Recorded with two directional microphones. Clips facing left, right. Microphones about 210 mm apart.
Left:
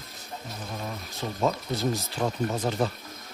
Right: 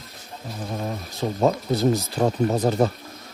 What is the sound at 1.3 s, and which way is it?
Speech, 40° right (ahead or behind).